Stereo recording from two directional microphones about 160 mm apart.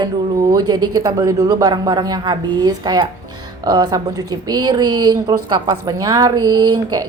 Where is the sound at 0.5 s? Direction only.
25° right (ahead or behind).